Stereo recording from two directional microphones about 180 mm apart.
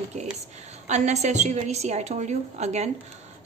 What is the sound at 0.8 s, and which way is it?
A woman's voice, 40° right (ahead or behind).